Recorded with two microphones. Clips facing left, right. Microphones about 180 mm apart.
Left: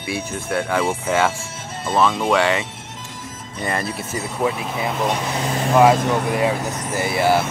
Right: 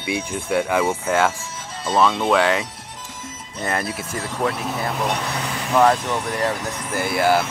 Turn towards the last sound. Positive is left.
turn(degrees=5)  # may be behind; listen again after turning